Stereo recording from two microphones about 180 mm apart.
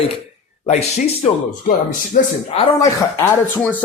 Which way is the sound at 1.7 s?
55° left (ahead or behind).